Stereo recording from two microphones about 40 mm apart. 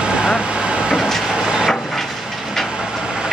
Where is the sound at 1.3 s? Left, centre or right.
Centre.